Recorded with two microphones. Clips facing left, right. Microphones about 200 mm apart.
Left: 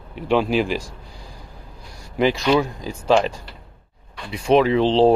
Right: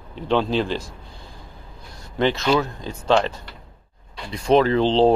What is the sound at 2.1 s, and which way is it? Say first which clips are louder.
Speech: left 2 dB; 10° left (ahead or behind).